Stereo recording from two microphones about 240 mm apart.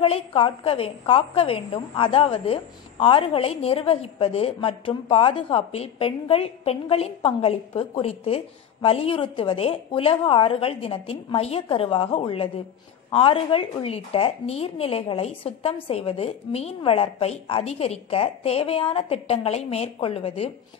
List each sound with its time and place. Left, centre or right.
0.0 s a woman's voice: left